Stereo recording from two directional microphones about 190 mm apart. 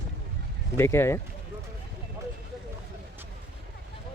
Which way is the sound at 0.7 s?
15° left (ahead or behind).